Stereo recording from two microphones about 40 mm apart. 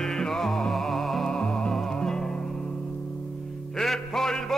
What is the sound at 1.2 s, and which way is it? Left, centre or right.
Music, left.